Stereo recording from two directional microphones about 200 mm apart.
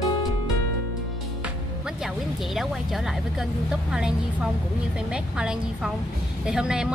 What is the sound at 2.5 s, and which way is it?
A woman's voice, centre (ahead or behind).